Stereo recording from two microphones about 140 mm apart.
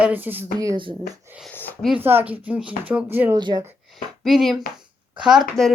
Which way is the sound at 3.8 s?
Centre (ahead or behind).